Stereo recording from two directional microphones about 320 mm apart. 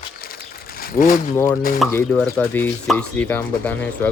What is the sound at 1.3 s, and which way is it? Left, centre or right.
Speech, centre.